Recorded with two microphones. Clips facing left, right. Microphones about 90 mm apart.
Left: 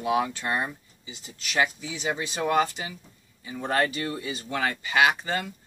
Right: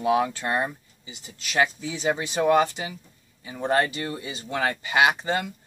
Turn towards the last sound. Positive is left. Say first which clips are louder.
# right 1 dB
turn(degrees=-25)  # may be behind; listen again after turning